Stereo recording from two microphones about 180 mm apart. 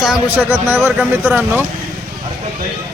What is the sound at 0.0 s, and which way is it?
A man's voice, 10° right (ahead or behind).